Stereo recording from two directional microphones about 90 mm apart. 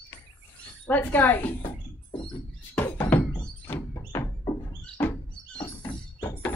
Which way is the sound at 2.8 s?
20° left (ahead or behind).